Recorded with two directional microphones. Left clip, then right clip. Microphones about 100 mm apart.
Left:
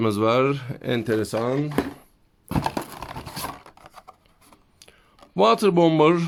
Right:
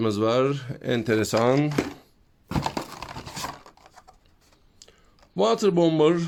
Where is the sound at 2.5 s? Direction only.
20° left (ahead or behind).